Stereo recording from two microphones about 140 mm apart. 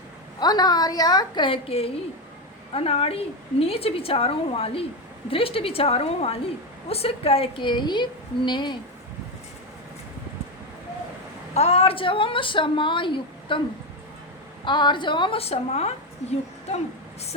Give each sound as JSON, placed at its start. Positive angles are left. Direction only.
{"t": 0.3, "sound": "a woman's voice", "side_deg": 30}
{"t": 11.5, "sound": "a woman's voice", "side_deg": 50}
{"t": 14.6, "sound": "a woman's voice", "side_deg": 35}